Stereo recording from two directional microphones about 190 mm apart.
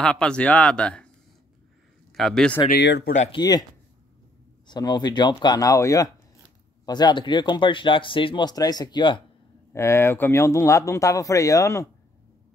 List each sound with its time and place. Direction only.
0.0 s speech: 5° left (ahead or behind)
2.1 s speech: centre (ahead or behind)
2.7 s speech: 65° left (ahead or behind)
3.3 s speech: 20° left (ahead or behind)
4.6 s speech: 20° left (ahead or behind)
9.7 s speech: 15° left (ahead or behind)